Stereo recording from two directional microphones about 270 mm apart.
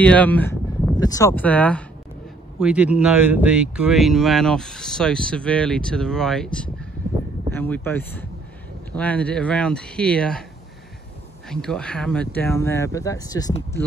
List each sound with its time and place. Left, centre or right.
0.0 s speech: centre
11.4 s speech: centre